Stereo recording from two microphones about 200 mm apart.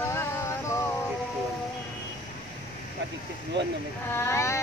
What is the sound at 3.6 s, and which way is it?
Speech, 60° right (ahead or behind).